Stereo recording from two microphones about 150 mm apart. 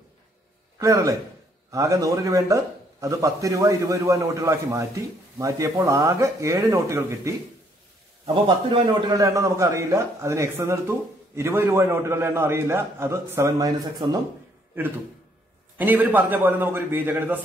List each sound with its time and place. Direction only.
0.7 s a man's voice: 20° right (ahead or behind)
8.3 s a man's voice: 35° right (ahead or behind)
9.2 s a man's voice: 20° right (ahead or behind)
15.8 s a man's voice: 10° right (ahead or behind)